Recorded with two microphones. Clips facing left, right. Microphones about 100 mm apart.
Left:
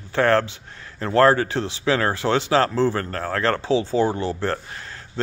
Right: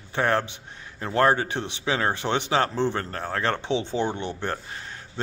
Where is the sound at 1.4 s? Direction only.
20° right (ahead or behind).